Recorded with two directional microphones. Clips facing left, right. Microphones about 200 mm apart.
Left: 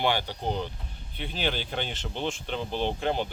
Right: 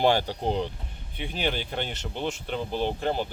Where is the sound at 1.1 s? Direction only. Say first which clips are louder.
Right 1 dB; 10° right (ahead or behind).